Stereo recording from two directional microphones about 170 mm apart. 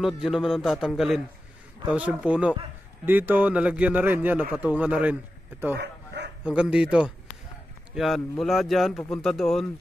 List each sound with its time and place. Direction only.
0.0 s a man's voice: centre (ahead or behind)
5.8 s bow-wow: 85° right
6.4 s speech: 5° right (ahead or behind)